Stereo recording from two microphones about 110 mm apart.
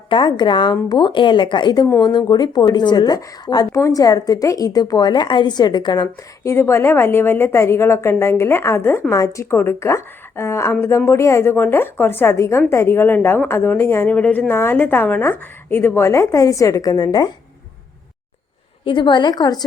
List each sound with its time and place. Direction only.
0.1 s a woman's voice: 45° left (ahead or behind)
3.7 s a woman's voice: 25° left (ahead or behind)
6.4 s a woman's voice: 25° left (ahead or behind)
18.9 s speech: 45° left (ahead or behind)